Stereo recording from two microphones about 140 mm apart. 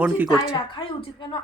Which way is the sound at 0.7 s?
35° left (ahead or behind).